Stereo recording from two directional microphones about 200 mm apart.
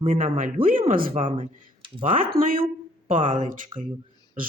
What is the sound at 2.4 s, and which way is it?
Speech, 45° right (ahead or behind).